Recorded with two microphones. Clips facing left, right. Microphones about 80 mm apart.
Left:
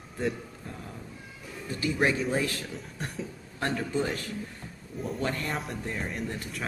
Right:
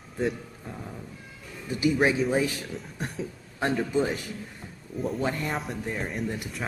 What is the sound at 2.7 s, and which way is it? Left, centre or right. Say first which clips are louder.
Speech: right 2 dB; centre.